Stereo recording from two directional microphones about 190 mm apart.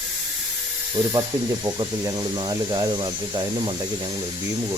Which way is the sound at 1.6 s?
20° right (ahead or behind).